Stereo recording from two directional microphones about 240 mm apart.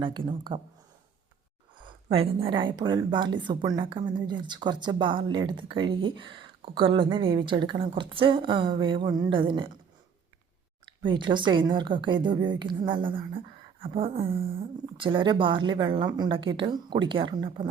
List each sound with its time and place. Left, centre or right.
0.0 s speech: centre
1.8 s speech: right
11.0 s speech: centre